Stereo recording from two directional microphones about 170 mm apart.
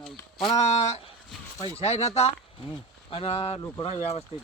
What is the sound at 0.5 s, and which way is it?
Speech, 40° left (ahead or behind).